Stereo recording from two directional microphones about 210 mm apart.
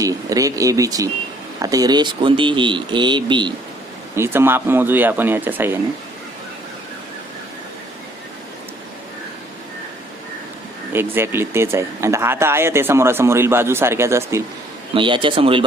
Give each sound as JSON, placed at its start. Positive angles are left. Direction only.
{"t": 0.0, "sound": "speech", "side_deg": -15}
{"t": 4.1, "sound": "speech", "side_deg": -10}
{"t": 10.9, "sound": "speech", "side_deg": -10}
{"t": 14.9, "sound": "speech", "side_deg": -25}